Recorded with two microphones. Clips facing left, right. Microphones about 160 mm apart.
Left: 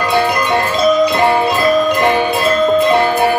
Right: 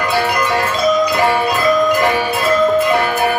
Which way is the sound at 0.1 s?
20° left (ahead or behind).